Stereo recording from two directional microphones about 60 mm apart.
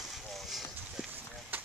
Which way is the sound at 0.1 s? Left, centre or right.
Centre.